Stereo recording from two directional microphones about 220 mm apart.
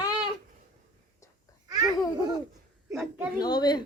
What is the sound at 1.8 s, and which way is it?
Babbling, 15° right (ahead or behind).